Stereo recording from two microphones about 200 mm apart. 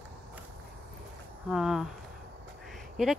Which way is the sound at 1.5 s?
Centre (ahead or behind).